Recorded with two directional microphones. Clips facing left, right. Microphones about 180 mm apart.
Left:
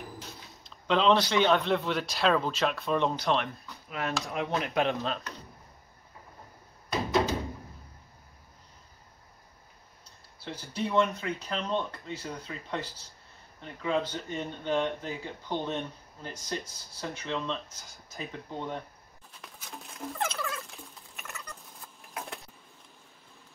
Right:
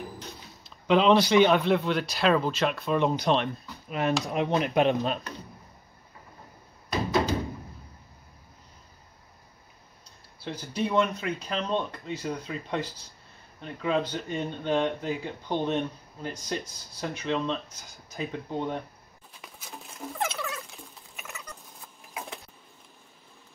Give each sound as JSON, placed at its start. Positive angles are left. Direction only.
{"t": 0.2, "sound": "a sound", "side_deg": 0}
{"t": 0.8, "sound": "speech", "side_deg": -10}
{"t": 1.6, "sound": "speech", "side_deg": 0}
{"t": 3.1, "sound": "speech", "side_deg": -15}
{"t": 10.4, "sound": "speech", "side_deg": -15}
{"t": 19.4, "sound": "patter", "side_deg": 0}